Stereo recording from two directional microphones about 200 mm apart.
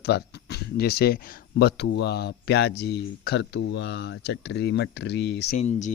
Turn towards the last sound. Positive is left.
turn(degrees=35)  # may be behind; listen again after turning